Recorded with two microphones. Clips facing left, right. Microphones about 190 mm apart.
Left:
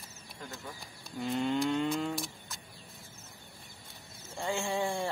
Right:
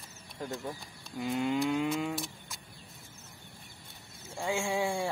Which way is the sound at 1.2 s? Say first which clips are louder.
Even; 5° right (ahead or behind).